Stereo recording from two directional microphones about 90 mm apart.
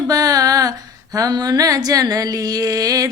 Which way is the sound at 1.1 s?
40° right (ahead or behind).